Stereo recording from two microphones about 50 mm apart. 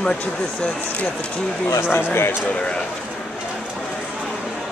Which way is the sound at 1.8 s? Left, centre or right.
Left.